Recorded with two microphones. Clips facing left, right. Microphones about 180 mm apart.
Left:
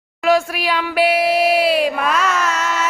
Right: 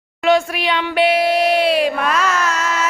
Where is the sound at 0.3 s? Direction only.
5° left (ahead or behind).